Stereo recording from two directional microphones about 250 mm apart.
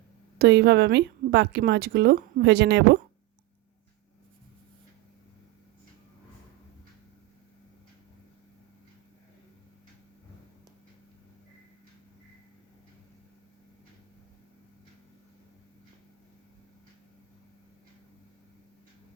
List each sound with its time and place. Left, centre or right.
0.3 s a woman's voice: right